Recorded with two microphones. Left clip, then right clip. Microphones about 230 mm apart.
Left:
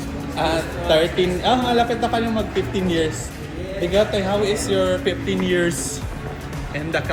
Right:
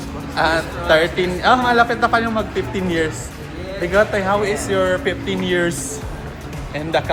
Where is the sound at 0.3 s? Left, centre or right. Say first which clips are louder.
Right 4 dB; right.